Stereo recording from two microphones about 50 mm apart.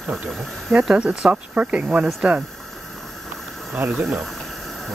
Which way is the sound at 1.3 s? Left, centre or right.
Right.